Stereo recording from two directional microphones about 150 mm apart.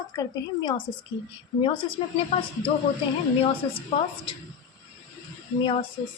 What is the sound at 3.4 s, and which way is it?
Speech, 35° left (ahead or behind).